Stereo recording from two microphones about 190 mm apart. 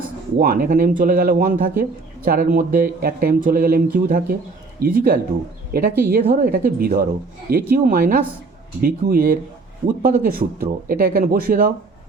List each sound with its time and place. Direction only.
0.3 s speech: 50° right (ahead or behind)